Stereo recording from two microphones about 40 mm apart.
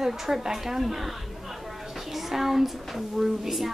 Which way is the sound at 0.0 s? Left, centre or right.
Centre.